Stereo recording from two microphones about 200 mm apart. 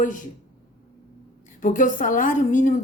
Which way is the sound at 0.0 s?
40° left (ahead or behind).